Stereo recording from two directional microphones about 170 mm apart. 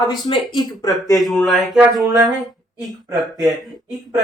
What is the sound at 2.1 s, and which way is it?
Speech, 20° right (ahead or behind).